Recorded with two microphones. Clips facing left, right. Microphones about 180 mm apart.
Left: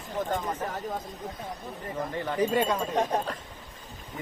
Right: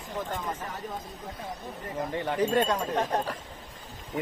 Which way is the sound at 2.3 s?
10° left (ahead or behind).